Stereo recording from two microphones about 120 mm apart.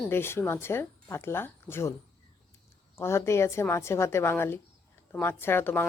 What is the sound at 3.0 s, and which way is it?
A woman's voice, 20° left (ahead or behind).